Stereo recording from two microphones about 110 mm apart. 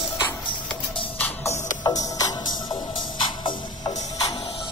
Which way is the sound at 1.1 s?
15° left (ahead or behind).